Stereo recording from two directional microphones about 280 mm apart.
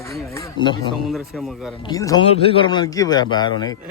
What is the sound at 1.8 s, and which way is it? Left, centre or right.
A man's voice, centre.